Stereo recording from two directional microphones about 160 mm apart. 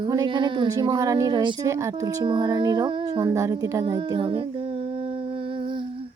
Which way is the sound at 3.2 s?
20° right (ahead or behind).